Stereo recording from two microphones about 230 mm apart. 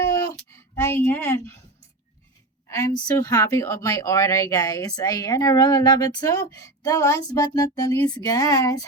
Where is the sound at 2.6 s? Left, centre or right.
Centre.